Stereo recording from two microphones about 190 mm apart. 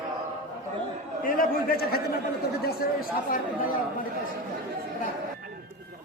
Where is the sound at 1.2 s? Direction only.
50° left (ahead or behind).